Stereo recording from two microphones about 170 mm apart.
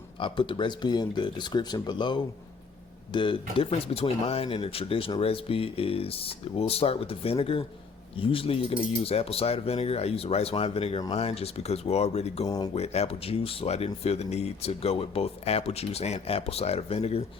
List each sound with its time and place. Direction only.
0.2 s speech: 30° left (ahead or behind)
12.5 s speech: 20° left (ahead or behind)
12.7 s speech: 40° left (ahead or behind)